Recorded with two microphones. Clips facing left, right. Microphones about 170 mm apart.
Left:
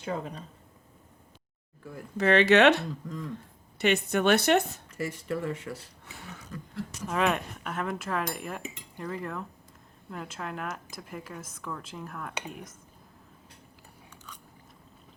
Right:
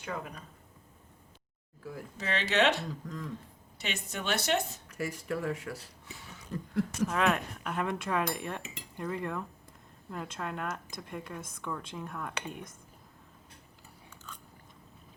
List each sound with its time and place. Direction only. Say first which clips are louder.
0.0 s a woman's voice: left 5 dB; 30° left (ahead or behind)
1.8 s speech: even; centre (ahead or behind)
2.1 s a woman's voice: left 9 dB; 65° left (ahead or behind)
3.0 s speech: left 3 dB; centre (ahead or behind)
3.8 s a woman's voice: left 13 dB; 65° left (ahead or behind)
4.9 s speech: left 2 dB; centre (ahead or behind)
6.1 s a sound: left 5 dB; 60° left (ahead or behind)
7.1 s speech: left 2 dB; centre (ahead or behind)